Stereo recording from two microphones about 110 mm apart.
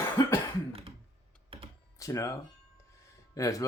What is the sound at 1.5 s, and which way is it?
Computer keyboard, 55° right (ahead or behind).